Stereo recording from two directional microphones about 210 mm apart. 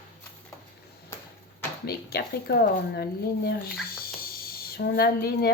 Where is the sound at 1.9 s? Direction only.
50° left (ahead or behind).